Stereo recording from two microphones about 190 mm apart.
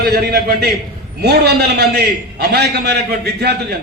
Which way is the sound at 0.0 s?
60° right (ahead or behind).